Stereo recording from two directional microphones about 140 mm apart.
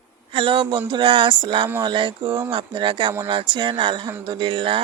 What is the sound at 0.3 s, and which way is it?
Speech, 40° right (ahead or behind).